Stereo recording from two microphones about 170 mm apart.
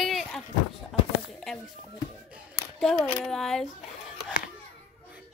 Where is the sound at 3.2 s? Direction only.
5° left (ahead or behind).